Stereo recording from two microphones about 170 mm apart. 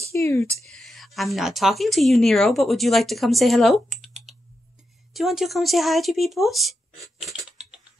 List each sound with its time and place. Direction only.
0.1 s speech: 15° left (ahead or behind)
0.7 s a woman's voice: centre (ahead or behind)